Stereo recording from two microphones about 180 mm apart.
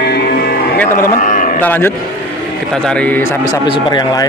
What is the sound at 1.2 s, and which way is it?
Livestock, 45° left (ahead or behind).